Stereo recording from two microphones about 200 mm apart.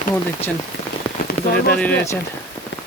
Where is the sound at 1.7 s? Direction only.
5° left (ahead or behind).